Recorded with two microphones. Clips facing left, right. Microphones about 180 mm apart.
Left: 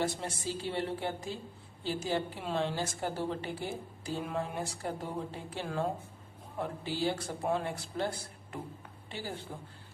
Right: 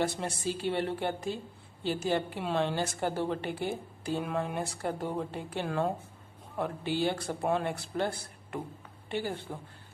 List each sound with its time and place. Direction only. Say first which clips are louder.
0.0 s a woman's voice: right 3 dB; 65° right (ahead or behind)